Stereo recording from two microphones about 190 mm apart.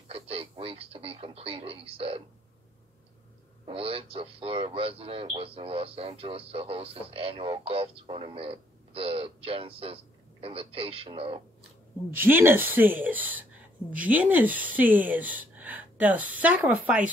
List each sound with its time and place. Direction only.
0.1 s speech: 30° right (ahead or behind)
3.6 s speech: 30° right (ahead or behind)
12.2 s a woman's voice: 10° right (ahead or behind)